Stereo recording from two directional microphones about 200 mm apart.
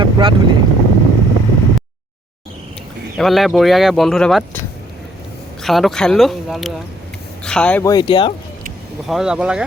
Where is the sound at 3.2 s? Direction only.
Centre (ahead or behind).